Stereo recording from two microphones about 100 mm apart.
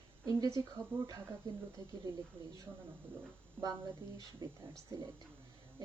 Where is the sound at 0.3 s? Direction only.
35° right (ahead or behind).